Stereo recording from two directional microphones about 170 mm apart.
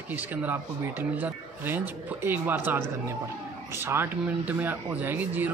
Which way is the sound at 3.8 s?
15° right (ahead or behind).